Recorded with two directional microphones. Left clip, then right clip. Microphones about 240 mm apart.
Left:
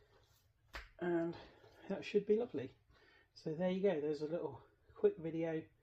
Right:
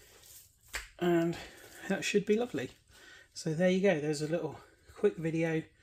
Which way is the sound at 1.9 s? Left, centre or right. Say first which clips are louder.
Right 6 dB; right.